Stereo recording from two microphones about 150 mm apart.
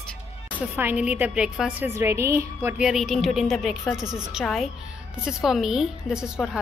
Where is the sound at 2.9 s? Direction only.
Centre (ahead or behind).